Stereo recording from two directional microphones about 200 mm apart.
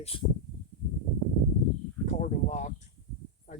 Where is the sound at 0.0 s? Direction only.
30° left (ahead or behind).